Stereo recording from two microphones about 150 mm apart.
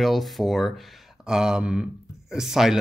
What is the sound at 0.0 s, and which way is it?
Speech, centre (ahead or behind).